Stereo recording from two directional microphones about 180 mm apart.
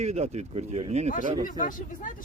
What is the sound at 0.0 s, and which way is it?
Speech, 40° right (ahead or behind).